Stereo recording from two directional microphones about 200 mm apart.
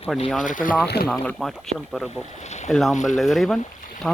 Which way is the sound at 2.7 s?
Centre (ahead or behind).